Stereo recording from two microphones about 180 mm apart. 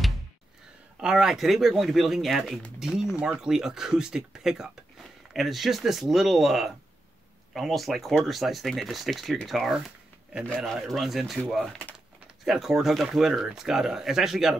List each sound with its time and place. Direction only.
0.9 s speech: 5° right (ahead or behind)